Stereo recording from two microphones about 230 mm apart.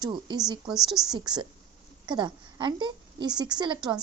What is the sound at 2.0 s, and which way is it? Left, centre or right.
A woman's voice, centre.